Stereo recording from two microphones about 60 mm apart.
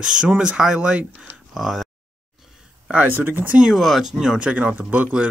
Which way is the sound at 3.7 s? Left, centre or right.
Centre.